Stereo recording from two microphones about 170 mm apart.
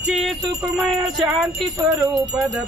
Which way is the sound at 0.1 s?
Centre (ahead or behind).